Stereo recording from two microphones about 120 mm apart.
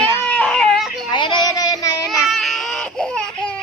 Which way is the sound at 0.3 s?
5° left (ahead or behind).